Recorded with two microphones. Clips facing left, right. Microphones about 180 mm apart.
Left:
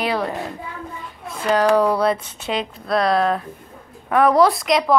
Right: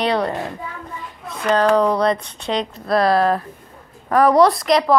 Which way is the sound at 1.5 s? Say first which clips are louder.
Right 1 dB; 10° left (ahead or behind).